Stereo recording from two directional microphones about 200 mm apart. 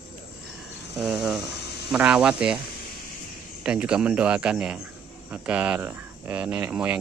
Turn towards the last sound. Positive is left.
turn(degrees=-10)  # may be behind; listen again after turning